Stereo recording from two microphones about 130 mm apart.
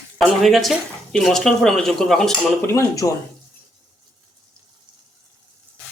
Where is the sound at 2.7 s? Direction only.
25° left (ahead or behind).